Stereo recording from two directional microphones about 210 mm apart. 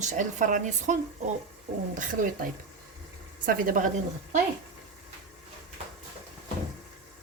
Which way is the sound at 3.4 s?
40° right (ahead or behind).